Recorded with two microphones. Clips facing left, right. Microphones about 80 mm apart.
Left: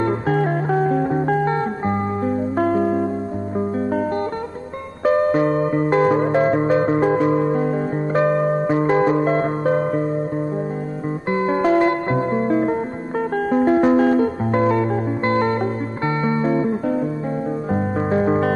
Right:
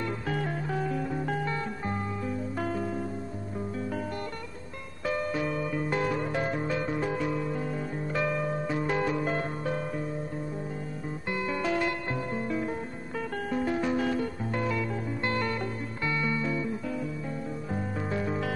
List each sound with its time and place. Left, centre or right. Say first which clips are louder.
0.0 s music: left 12 dB; left
5.0 s music: left 14 dB; left
11.2 s music: left 12 dB; left